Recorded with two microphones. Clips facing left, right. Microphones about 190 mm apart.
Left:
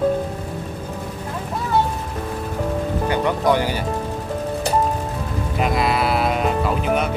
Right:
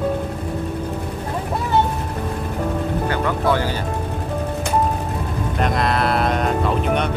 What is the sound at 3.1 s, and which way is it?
Speech, 15° left (ahead or behind).